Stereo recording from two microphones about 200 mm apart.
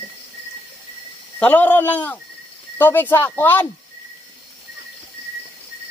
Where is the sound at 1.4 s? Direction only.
10° left (ahead or behind).